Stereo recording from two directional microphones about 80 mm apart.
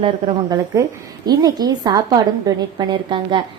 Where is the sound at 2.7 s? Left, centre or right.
Right.